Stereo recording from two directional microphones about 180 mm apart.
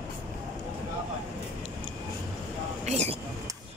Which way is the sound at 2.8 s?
40° right (ahead or behind).